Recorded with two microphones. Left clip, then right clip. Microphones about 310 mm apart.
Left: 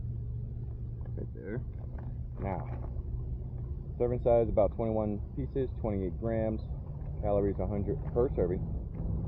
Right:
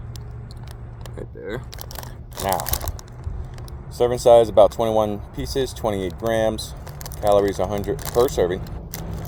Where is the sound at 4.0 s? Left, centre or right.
Centre.